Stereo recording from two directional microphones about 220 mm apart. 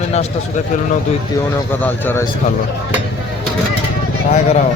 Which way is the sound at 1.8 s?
10° left (ahead or behind).